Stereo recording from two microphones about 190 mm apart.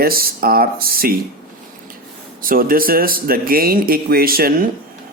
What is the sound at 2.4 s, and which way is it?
Speech, 50° right (ahead or behind).